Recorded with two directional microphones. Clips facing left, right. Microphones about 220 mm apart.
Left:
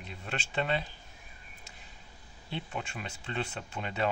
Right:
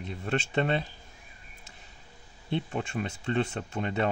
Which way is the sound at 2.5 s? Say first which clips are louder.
Right 7 dB; 50° right (ahead or behind).